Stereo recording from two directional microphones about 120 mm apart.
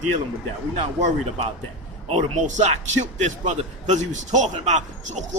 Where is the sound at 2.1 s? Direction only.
75° right (ahead or behind).